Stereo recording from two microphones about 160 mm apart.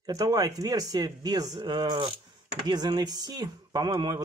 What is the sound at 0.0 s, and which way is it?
Speech, 25° right (ahead or behind).